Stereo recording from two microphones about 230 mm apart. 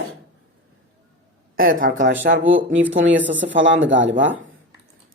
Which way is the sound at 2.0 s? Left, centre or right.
Right.